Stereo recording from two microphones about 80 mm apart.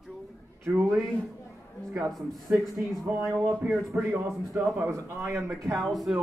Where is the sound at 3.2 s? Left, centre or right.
Right.